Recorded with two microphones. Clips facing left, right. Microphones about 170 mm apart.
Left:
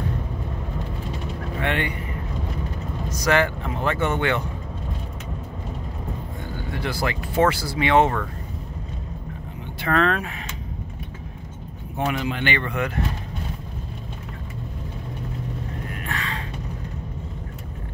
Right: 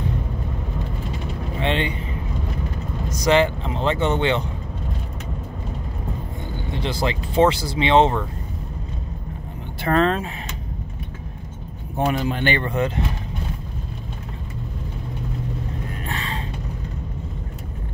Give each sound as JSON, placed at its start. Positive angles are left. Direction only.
{"t": 1.6, "sound": "speech", "side_deg": -25}
{"t": 3.3, "sound": "speech", "side_deg": -20}
{"t": 6.7, "sound": "speech", "side_deg": -20}
{"t": 9.8, "sound": "speech", "side_deg": -30}
{"t": 12.0, "sound": "speech", "side_deg": -35}
{"t": 16.1, "sound": "a sound", "side_deg": -30}